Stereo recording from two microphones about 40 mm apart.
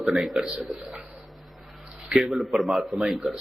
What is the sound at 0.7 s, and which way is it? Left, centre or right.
Speech, right.